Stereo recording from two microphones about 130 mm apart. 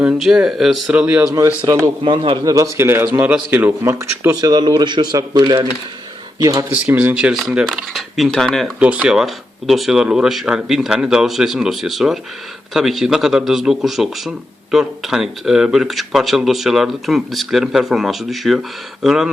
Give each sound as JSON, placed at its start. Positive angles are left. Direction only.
{"t": 0.0, "sound": "a man's voice", "side_deg": -5}
{"t": 1.6, "sound": "a man's voice", "side_deg": -20}
{"t": 2.0, "sound": "speech", "side_deg": -40}
{"t": 2.4, "sound": "a man's voice", "side_deg": -25}
{"t": 3.9, "sound": "a man's voice", "side_deg": -25}
{"t": 6.9, "sound": "a man's voice", "side_deg": -10}
{"t": 8.8, "sound": "a man's voice", "side_deg": -10}